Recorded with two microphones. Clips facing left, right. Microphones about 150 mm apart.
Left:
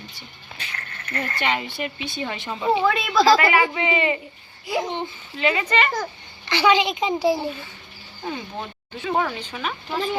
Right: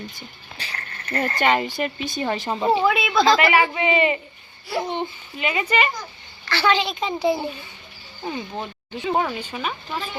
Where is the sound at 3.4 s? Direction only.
20° right (ahead or behind).